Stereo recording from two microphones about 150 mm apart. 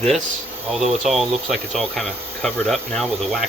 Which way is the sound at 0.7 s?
Centre (ahead or behind).